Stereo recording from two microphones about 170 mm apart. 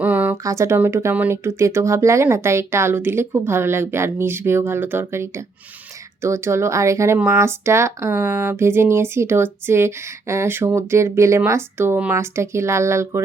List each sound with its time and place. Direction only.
0.0 s speech: 10° right (ahead or behind)